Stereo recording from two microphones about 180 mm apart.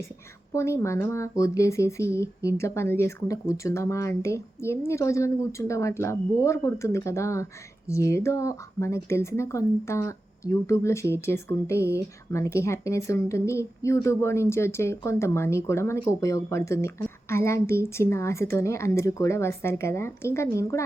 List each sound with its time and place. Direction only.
0.5 s a woman's voice: 15° left (ahead or behind)